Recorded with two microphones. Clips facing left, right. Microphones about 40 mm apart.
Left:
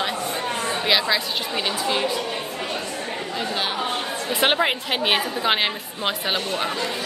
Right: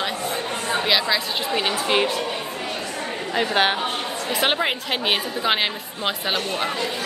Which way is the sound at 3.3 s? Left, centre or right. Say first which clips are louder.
Right 7 dB; right.